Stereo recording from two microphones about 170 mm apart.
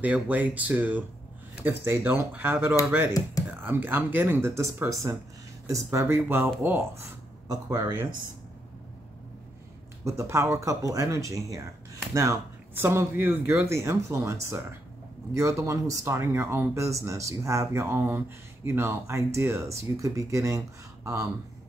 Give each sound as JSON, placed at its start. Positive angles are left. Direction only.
{"t": 0.0, "sound": "speech", "side_deg": -10}
{"t": 3.1, "sound": "speech", "side_deg": 20}
{"t": 3.6, "sound": "speech", "side_deg": -10}
{"t": 10.0, "sound": "speech", "side_deg": -15}